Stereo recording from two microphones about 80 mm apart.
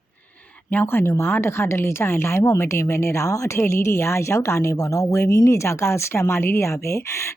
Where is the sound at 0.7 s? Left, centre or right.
Left.